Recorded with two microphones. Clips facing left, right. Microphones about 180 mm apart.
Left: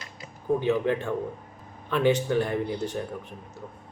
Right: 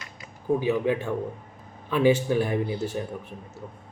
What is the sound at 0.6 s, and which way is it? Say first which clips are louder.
A man's voice: even; 10° right (ahead or behind).